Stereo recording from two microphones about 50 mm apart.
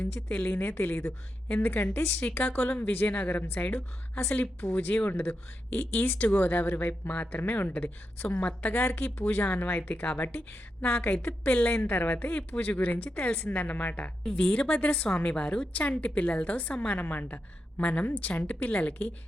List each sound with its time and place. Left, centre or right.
0.0 s speech: left
1.9 s a woman's voice: left
2.2 s speech: left
3.7 s a woman's voice: left
4.3 s speech: left
14.3 s a woman's voice: centre; by 17.4 s left
17.7 s a woman's voice: left